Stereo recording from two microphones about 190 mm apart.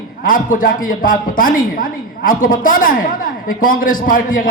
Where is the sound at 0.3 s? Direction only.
45° left (ahead or behind).